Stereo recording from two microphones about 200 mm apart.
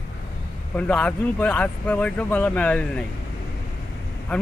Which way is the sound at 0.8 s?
5° left (ahead or behind).